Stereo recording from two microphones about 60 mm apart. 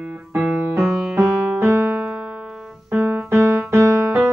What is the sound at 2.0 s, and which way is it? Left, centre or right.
Keyboard, centre.